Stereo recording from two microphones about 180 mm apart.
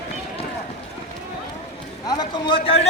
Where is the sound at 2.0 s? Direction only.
25° left (ahead or behind).